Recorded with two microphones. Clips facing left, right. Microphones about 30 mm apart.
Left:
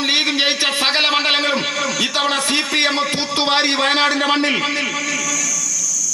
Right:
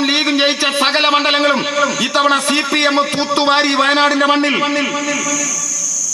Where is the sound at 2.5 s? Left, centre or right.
Centre.